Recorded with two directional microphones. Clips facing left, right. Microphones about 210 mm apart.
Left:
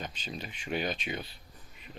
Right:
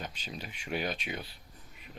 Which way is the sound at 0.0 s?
5° right (ahead or behind).